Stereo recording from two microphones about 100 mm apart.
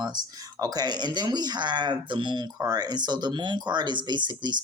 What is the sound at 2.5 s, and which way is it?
Speech, 40° right (ahead or behind).